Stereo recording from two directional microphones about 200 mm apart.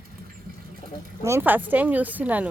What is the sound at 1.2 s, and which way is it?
A woman's voice, 10° right (ahead or behind).